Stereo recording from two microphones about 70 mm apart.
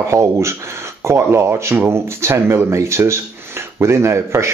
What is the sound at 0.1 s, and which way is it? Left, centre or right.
Speech, right.